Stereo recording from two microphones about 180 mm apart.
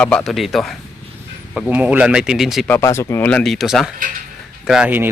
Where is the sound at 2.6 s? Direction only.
15° left (ahead or behind); by 5.1 s 10° right (ahead or behind).